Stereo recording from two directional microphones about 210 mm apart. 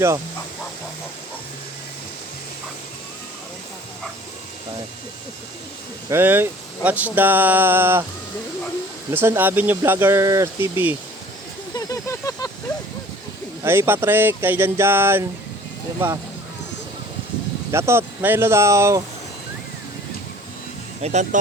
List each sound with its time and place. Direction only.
6.1 s speech: 10° right (ahead or behind)
9.1 s speech: 10° right (ahead or behind)
11.7 s a sound: 15° left (ahead or behind)
13.7 s speech: 10° right (ahead or behind)
17.7 s speech: 15° right (ahead or behind)
21.0 s speech: 30° right (ahead or behind)